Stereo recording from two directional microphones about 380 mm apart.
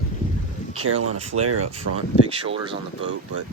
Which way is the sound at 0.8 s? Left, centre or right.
Right.